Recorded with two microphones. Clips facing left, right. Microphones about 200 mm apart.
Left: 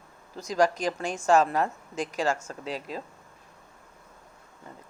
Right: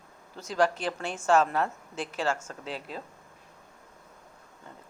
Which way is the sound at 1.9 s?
40° left (ahead or behind).